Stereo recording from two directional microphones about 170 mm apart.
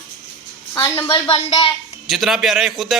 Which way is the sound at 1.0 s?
30° left (ahead or behind).